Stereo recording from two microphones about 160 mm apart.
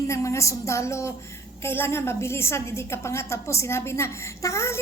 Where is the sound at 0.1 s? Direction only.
20° left (ahead or behind).